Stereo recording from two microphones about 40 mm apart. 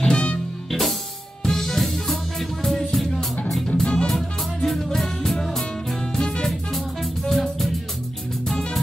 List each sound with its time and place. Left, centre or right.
0.0 s music: left
0.7 s music: centre
3.6 s music: centre
4.6 s music: centre